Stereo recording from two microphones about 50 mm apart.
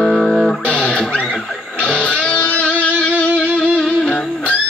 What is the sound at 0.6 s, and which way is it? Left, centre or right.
Music, left.